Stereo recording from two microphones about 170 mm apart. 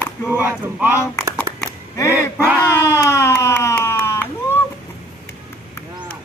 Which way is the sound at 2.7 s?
15° left (ahead or behind).